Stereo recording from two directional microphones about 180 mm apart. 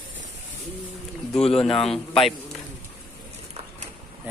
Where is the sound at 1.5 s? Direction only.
30° left (ahead or behind).